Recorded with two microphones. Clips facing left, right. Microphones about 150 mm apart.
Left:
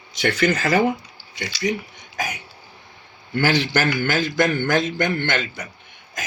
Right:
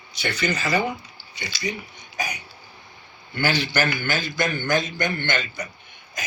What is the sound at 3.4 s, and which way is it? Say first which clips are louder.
A man's voice: left 3 dB; 90° left.